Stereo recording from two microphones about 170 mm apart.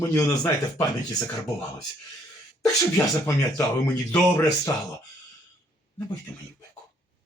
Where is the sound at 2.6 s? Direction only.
15° left (ahead or behind).